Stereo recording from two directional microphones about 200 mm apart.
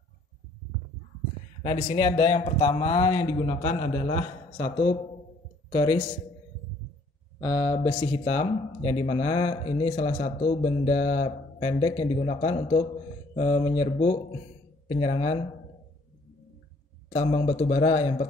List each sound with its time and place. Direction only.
1.6 s a man's voice: 25° left (ahead or behind)
5.7 s speech: 20° left (ahead or behind)
7.3 s speech: 15° left (ahead or behind)
7.7 s speech: 30° left (ahead or behind)
17.1 s speech: 30° left (ahead or behind)